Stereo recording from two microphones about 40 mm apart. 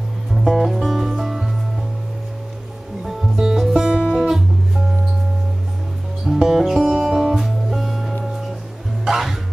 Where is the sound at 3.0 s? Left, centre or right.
Centre.